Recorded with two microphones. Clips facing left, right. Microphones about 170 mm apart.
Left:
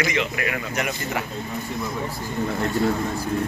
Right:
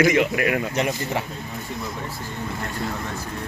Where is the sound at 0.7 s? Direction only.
30° right (ahead or behind).